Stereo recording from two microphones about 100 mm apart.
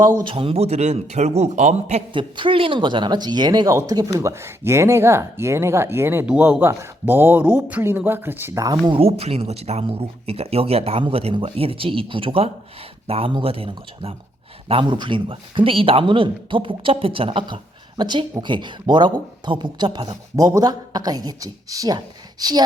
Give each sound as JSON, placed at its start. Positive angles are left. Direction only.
{"t": 0.3, "sound": "a man's voice", "side_deg": -65}
{"t": 2.3, "sound": "speech", "side_deg": -60}
{"t": 6.2, "sound": "speech", "side_deg": -15}
{"t": 8.5, "sound": "speech", "side_deg": -35}
{"t": 8.9, "sound": "speech", "side_deg": -80}
{"t": 14.7, "sound": "speech", "side_deg": -55}